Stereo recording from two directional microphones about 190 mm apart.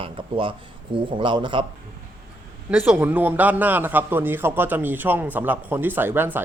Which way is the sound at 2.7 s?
10° right (ahead or behind).